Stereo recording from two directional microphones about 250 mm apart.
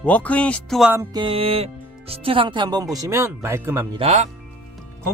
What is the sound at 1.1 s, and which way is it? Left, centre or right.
Speech, right.